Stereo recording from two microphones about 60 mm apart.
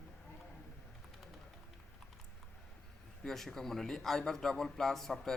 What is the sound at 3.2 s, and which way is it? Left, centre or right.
A man's voice, centre.